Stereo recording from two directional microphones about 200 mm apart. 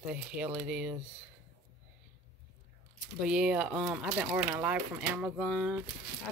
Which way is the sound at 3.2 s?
5° right (ahead or behind).